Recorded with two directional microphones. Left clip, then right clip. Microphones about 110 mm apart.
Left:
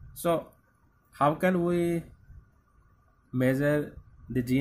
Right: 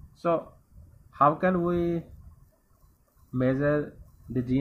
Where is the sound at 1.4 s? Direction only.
10° left (ahead or behind).